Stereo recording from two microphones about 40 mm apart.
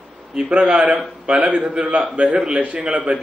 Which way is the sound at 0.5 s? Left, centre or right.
Right.